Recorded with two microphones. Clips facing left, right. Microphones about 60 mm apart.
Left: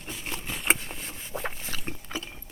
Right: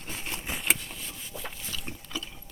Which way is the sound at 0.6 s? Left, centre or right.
Left.